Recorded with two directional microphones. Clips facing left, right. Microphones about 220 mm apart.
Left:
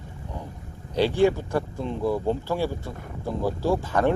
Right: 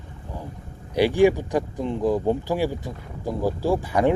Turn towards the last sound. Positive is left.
turn(degrees=-15)  # may be behind; listen again after turning